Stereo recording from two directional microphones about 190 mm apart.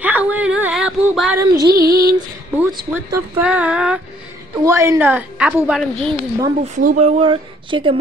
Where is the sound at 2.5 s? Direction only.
5° right (ahead or behind).